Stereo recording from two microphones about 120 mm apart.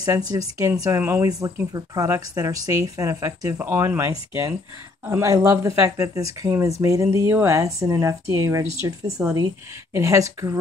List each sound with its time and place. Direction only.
0.0 s speech: 30° right (ahead or behind)